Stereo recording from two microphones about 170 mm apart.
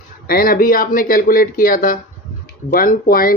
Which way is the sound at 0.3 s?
60° left (ahead or behind).